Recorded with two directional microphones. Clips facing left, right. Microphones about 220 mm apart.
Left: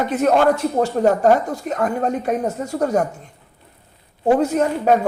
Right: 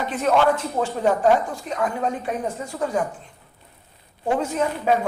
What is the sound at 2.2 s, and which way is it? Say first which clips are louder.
Speech: left 6 dB; 45° left (ahead or behind).